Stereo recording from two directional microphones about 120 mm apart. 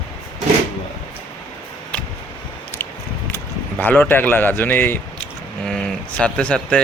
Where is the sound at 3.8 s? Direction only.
15° left (ahead or behind).